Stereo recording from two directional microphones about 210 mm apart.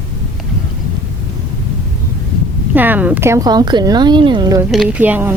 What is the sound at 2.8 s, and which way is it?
A woman's voice, 10° right (ahead or behind).